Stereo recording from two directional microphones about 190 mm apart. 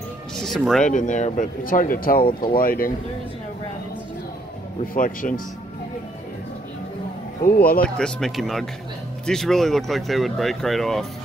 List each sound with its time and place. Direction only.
0.4 s speech: centre (ahead or behind)
0.9 s speech: 40° left (ahead or behind)
4.9 s speech: 45° left (ahead or behind)
7.4 s speech: 50° left (ahead or behind)
8.0 s speech: centre (ahead or behind)